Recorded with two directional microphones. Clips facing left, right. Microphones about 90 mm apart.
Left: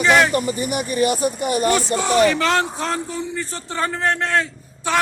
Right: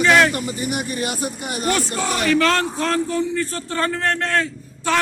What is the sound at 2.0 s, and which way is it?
A man's voice, 20° left (ahead or behind).